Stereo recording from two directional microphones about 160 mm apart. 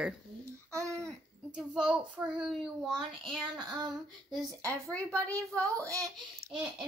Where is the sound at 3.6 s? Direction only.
25° right (ahead or behind).